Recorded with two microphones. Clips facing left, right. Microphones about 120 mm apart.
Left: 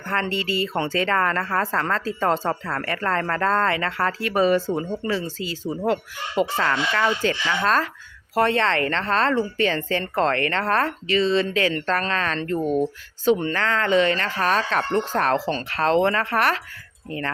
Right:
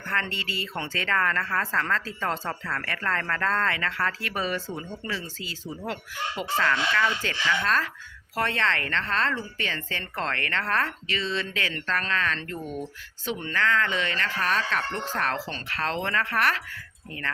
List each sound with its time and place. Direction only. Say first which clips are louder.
0.0 s a woman's voice: left 6 dB; 30° left (ahead or behind)